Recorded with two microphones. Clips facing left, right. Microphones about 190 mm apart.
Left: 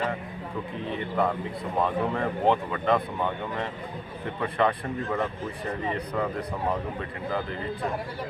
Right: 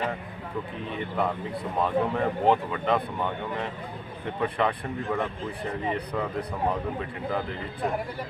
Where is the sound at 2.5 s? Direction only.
Centre (ahead or behind).